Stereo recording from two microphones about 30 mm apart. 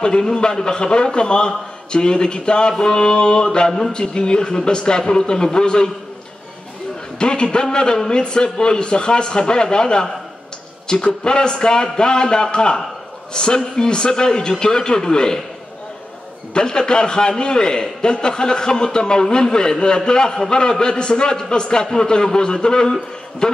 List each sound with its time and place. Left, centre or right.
0.0 s a man's voice: left
7.2 s a man's voice: left
16.5 s a man's voice: left